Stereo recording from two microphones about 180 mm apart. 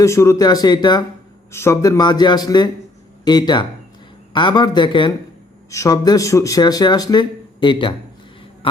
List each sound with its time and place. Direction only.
0.0 s speech: 15° left (ahead or behind)